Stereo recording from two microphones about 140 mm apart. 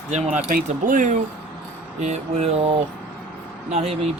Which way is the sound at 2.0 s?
55° right (ahead or behind).